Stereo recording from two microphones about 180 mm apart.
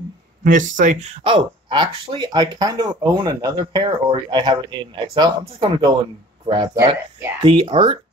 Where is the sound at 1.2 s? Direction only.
25° right (ahead or behind).